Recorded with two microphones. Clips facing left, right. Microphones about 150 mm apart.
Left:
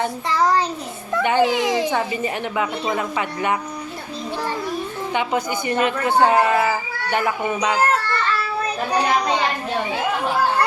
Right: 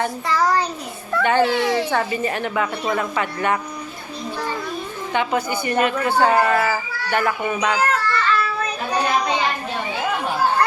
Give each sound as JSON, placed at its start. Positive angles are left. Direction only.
{"t": 0.0, "sound": "a child's voice", "side_deg": 20}
{"t": 5.1, "sound": "a woman's voice", "side_deg": 20}
{"t": 7.8, "sound": "child singing", "side_deg": 40}